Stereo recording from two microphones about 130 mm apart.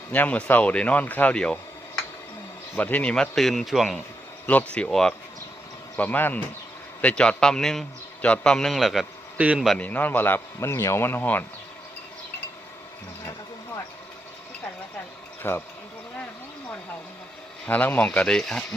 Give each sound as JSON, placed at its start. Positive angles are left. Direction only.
{"t": 0.1, "sound": "a man's voice", "side_deg": 10}
{"t": 2.7, "sound": "a man's voice", "side_deg": 15}
{"t": 4.4, "sound": "a man's voice", "side_deg": 10}
{"t": 9.6, "sound": "a man's voice", "side_deg": 10}
{"t": 15.4, "sound": "a man's voice", "side_deg": 15}
{"t": 17.7, "sound": "a man's voice", "side_deg": 15}